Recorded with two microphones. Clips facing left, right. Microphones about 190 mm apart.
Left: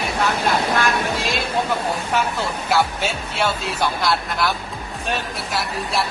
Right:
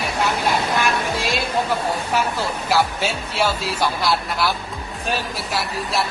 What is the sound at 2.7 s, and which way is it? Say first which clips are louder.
Speech: even; centre (ahead or behind).